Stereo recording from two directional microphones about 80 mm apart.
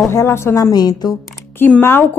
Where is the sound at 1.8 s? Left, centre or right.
Left.